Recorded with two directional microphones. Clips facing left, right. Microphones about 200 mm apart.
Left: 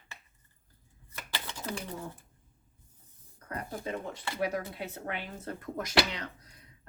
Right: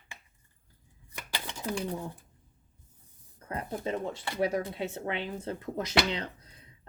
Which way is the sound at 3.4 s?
25° right (ahead or behind).